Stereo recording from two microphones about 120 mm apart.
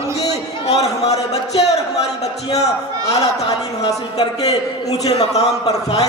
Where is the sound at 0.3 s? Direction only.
65° left (ahead or behind).